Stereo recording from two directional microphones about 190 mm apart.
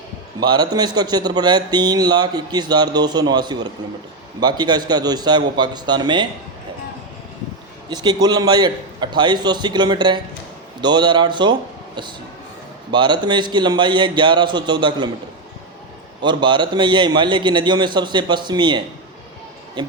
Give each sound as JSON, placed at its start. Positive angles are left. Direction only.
{"t": 0.3, "sound": "a man's voice", "side_deg": -20}
{"t": 7.9, "sound": "a man's voice", "side_deg": -20}
{"t": 12.9, "sound": "a man's voice", "side_deg": -25}
{"t": 16.2, "sound": "a man's voice", "side_deg": -25}